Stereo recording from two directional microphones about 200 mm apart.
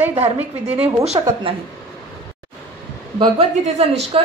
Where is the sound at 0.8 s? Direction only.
30° right (ahead or behind).